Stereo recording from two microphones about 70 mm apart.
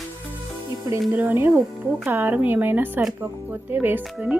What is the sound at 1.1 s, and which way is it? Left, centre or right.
Speech, right.